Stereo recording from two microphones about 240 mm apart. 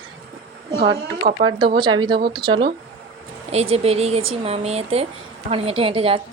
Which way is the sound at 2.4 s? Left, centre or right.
Centre.